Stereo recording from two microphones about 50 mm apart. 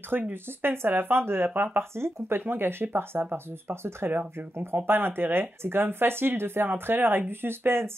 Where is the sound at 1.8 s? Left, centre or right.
Right.